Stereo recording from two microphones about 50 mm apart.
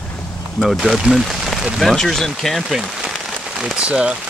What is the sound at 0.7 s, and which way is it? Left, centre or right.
Speech, centre.